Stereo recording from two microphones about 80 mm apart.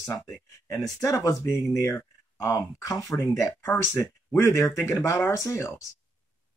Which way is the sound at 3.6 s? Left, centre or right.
Left.